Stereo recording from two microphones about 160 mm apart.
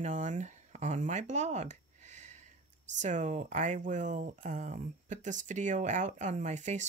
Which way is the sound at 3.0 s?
50° right (ahead or behind).